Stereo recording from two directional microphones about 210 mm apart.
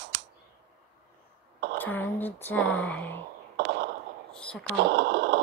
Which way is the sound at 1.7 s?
10° left (ahead or behind).